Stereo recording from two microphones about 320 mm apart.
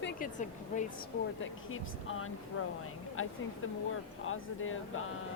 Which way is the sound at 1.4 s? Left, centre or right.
Left.